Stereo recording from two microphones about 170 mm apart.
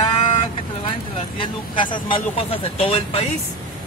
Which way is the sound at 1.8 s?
50° left (ahead or behind).